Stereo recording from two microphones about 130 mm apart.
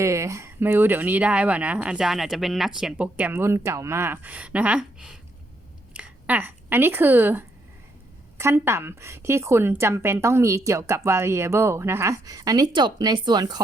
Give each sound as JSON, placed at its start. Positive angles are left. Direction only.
{"t": 0.0, "sound": "a woman's voice", "side_deg": -25}